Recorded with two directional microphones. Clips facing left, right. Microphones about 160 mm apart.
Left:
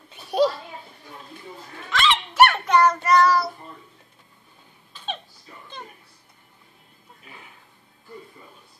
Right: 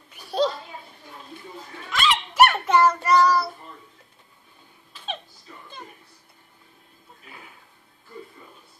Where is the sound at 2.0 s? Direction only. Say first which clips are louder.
Left 1 dB; 10° right (ahead or behind).